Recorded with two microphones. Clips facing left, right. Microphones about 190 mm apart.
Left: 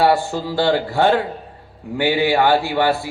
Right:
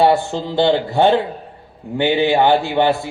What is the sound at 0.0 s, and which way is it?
A man's voice, 20° right (ahead or behind).